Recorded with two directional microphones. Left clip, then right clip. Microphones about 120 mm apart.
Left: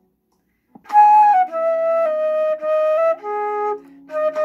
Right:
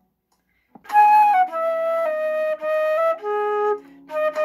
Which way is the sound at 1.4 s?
45° right (ahead or behind).